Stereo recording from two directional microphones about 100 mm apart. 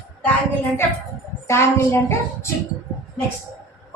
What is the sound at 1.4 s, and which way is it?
A woman's voice, 25° left (ahead or behind).